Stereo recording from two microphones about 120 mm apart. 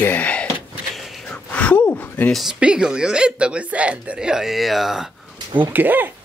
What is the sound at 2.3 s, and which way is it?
Speech, 5° right (ahead or behind).